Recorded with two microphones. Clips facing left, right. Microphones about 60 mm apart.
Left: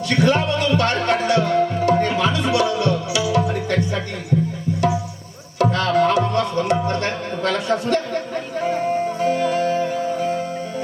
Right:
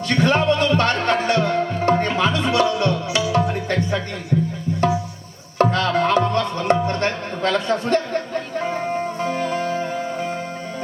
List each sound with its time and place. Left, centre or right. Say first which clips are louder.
0.1 s music: right 1 dB; right
5.5 s music: left 1 dB; right
7.9 s speech: right 1 dB; right
9.3 s music: left 4 dB; right